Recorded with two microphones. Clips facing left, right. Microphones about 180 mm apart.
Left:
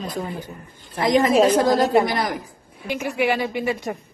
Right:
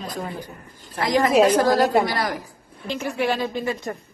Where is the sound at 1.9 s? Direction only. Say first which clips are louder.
Left 2 dB; 20° left (ahead or behind).